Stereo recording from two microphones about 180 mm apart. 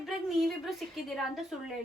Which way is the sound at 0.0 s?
Centre (ahead or behind).